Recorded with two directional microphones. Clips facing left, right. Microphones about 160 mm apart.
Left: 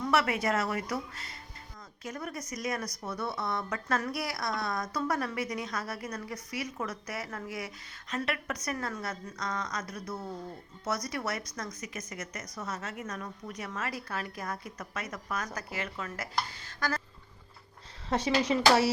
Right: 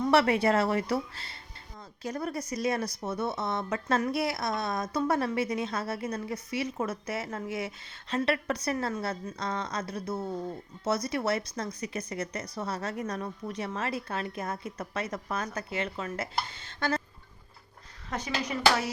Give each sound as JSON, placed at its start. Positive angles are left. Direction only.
{"t": 0.0, "sound": "a woman's voice", "side_deg": -30}
{"t": 18.1, "sound": "speech", "side_deg": 30}